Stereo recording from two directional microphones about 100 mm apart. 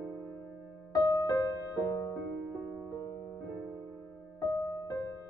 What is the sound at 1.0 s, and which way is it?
Music, 40° left (ahead or behind).